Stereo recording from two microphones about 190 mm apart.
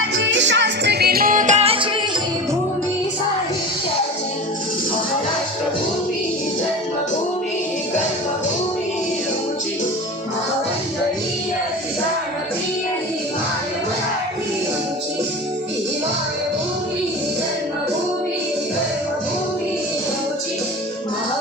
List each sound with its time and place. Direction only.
0.1 s music: 70° right (ahead or behind); by 1.9 s 30° right (ahead or behind)